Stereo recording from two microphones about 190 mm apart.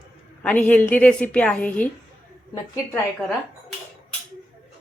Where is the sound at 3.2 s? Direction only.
Centre (ahead or behind).